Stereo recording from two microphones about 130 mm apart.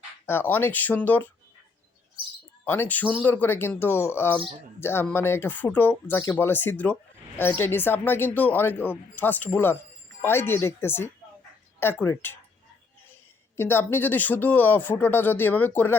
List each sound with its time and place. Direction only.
0.3 s speech: 15° left (ahead or behind)
2.6 s speech: 15° left (ahead or behind)
13.6 s speech: 20° left (ahead or behind)